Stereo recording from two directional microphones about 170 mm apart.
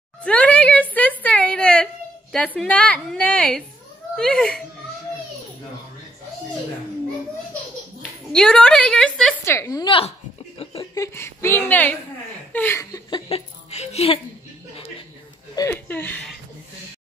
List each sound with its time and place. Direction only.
0.2 s speech: 5° left (ahead or behind)
0.9 s a sound: 10° left (ahead or behind)
2.3 s a woman's voice: 5° left (ahead or behind)
8.3 s a woman's voice: 5° left (ahead or behind)
9.4 s a woman's voice: 15° left (ahead or behind)
10.6 s a sound: 35° left (ahead or behind)
11.0 s a woman's voice: 15° left (ahead or behind)
13.3 s speech: 40° left (ahead or behind)
15.5 s speech: 20° left (ahead or behind)
15.9 s a woman's voice: 10° left (ahead or behind)